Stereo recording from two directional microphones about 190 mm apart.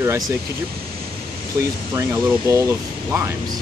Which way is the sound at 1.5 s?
15° right (ahead or behind).